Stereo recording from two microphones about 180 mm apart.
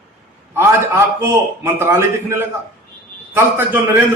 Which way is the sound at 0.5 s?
15° right (ahead or behind).